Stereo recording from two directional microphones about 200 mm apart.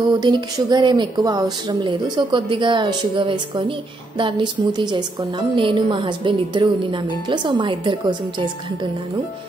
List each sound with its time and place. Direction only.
0.2 s a woman's voice: 20° right (ahead or behind)